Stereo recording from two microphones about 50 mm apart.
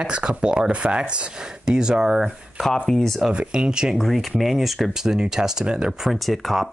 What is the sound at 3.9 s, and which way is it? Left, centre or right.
Speech, centre.